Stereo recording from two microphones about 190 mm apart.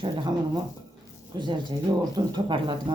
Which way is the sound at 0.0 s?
20° right (ahead or behind).